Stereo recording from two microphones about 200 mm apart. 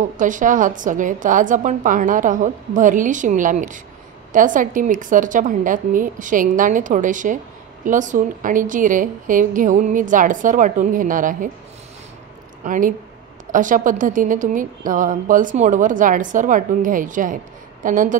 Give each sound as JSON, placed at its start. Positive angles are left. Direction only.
{"t": 0.2, "sound": "a woman's voice", "side_deg": -40}
{"t": 12.6, "sound": "a woman's voice", "side_deg": -40}